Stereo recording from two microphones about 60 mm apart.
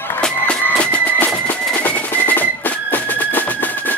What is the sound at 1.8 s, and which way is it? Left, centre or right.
Music, left.